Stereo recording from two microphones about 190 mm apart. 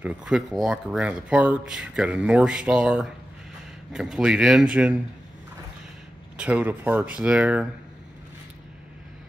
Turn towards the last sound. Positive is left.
turn(degrees=-5)  # may be behind; listen again after turning